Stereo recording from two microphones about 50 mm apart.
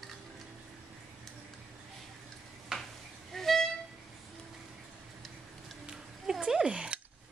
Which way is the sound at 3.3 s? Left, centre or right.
Centre.